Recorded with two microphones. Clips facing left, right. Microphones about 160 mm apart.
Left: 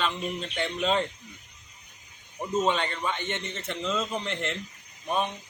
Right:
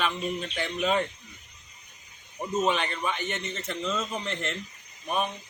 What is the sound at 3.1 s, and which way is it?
Speech, 25° left (ahead or behind).